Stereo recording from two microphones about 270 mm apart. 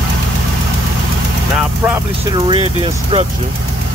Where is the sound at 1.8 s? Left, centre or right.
Centre.